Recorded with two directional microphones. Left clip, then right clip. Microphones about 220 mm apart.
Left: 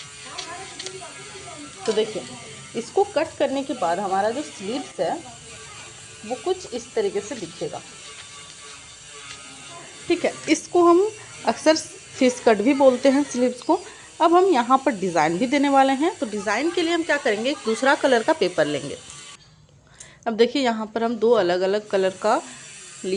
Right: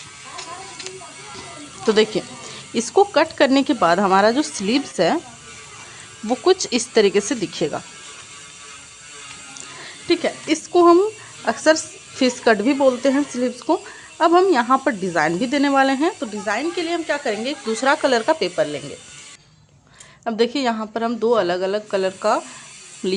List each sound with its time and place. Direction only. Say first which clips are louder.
2.7 s speech: right 6 dB; 30° right (ahead or behind)
6.2 s speech: right 9 dB; 40° right (ahead or behind)
10.1 s speech: right 1 dB; 10° right (ahead or behind)
20.2 s speech: even; 5° right (ahead or behind)